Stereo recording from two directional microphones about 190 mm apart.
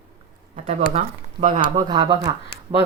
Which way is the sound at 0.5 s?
40° right (ahead or behind).